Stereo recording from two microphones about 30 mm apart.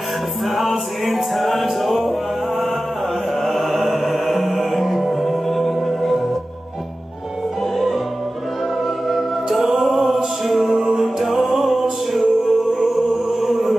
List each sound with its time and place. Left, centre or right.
0.5 s music: centre
7.7 s music: centre
10.8 s music: centre